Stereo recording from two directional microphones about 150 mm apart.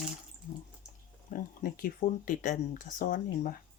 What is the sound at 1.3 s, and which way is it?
Speech, 75° left (ahead or behind).